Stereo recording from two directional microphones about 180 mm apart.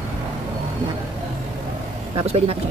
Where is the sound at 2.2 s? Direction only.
35° right (ahead or behind).